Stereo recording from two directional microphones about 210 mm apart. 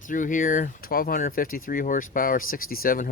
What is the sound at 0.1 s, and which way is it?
Speech, 40° left (ahead or behind).